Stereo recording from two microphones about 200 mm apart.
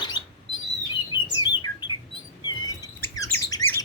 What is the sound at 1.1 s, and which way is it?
Bird, 20° left (ahead or behind).